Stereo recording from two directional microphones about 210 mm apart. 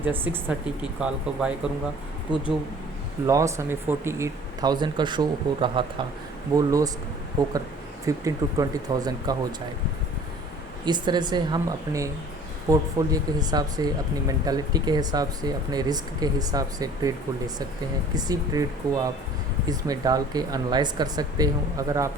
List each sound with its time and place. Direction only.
0.0 s speech: 10° right (ahead or behind)
3.2 s speech: 15° right (ahead or behind)
10.8 s speech: 20° right (ahead or behind)
18.1 s speech: 20° right (ahead or behind)